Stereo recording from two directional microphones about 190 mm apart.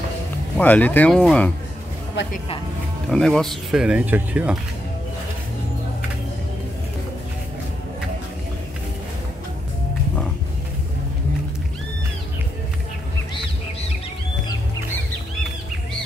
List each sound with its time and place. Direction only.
0.6 s speech: 10° left (ahead or behind)
3.1 s speech: 5° left (ahead or behind)